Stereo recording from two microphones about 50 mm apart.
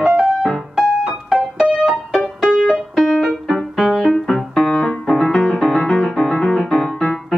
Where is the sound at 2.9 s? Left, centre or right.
Centre.